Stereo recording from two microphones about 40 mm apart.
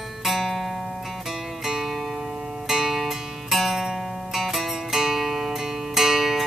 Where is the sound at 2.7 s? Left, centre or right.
Centre.